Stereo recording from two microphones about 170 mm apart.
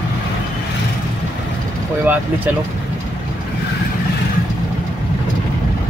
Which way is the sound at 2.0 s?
10° right (ahead or behind).